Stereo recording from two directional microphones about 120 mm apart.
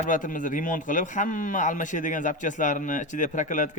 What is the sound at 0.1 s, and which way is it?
Speech, 90° left.